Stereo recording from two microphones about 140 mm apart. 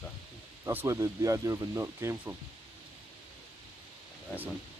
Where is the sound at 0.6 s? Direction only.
20° right (ahead or behind).